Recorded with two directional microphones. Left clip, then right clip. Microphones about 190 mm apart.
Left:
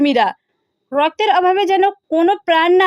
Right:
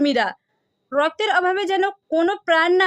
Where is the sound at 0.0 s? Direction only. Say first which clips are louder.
Left 5 dB; 15° left (ahead or behind).